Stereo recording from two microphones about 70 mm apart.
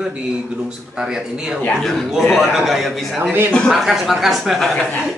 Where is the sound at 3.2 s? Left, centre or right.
Right.